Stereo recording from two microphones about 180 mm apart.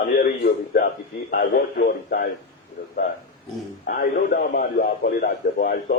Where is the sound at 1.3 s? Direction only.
55° left (ahead or behind).